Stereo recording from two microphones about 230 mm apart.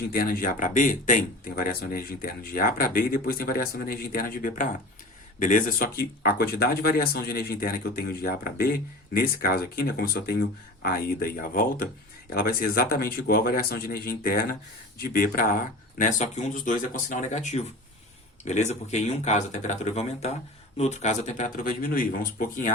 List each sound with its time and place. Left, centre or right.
0.1 s speech: left